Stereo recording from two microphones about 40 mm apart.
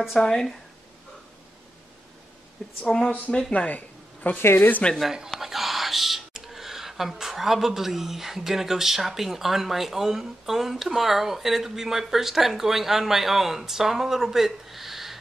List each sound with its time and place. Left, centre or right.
0.2 s speech: centre
2.8 s speech: centre
3.5 s speech: left
4.4 s speech: left
5.4 s speech: centre